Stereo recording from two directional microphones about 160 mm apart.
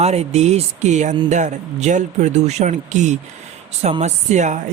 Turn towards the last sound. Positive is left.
turn(degrees=-45)  # may be behind; listen again after turning